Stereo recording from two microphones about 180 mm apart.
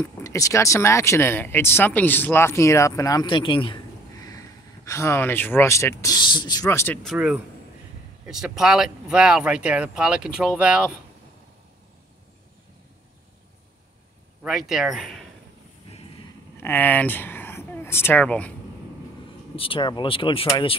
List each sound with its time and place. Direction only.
0.0 s speech: 15° left (ahead or behind)
6.6 s speech: 10° left (ahead or behind)
7.0 s speech: 5° right (ahead or behind)
14.4 s speech: centre (ahead or behind)
16.5 s speech: 10° left (ahead or behind)
19.5 s speech: 30° left (ahead or behind)